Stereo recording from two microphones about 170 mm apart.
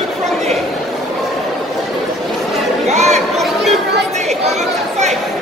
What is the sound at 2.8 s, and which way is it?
Chatter, 40° right (ahead or behind).